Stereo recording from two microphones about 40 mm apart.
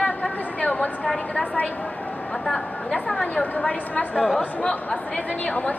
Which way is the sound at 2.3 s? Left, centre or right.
Centre.